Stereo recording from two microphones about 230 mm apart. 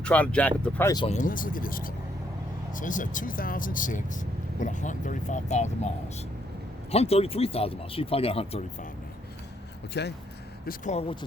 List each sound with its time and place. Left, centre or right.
0.0 s speech: centre
1.0 s speech: left
6.9 s speech: left
10.0 s speech: left
10.7 s speech: left